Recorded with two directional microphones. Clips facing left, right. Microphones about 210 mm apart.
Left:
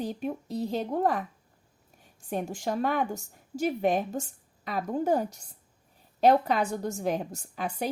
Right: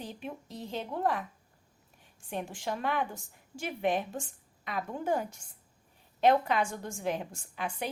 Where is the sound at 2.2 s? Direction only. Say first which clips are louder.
Left 5 dB; 40° left (ahead or behind).